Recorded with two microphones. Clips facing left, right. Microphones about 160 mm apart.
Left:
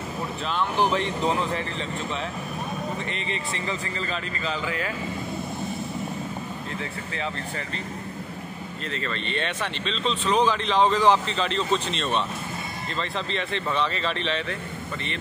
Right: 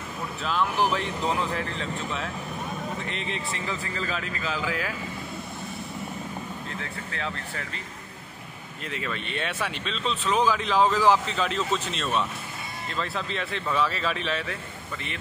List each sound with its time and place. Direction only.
0.5 s speech: centre (ahead or behind)
6.8 s speech: centre (ahead or behind)
8.9 s speech: 10° right (ahead or behind)